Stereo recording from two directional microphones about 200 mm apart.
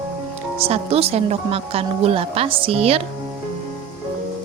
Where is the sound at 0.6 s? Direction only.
30° right (ahead or behind).